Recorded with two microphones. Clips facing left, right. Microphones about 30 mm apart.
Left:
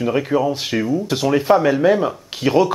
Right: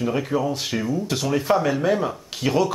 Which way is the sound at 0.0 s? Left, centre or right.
Centre.